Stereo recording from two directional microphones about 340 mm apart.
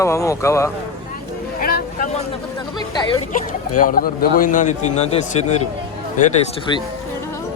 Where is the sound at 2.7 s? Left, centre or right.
Centre.